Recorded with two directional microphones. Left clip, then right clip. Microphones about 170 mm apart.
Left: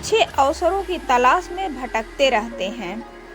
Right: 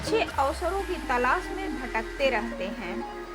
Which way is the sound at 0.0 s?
35° left (ahead or behind).